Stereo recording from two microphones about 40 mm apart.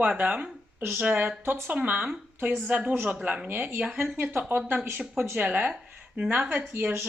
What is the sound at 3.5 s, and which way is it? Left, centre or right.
Speech, right.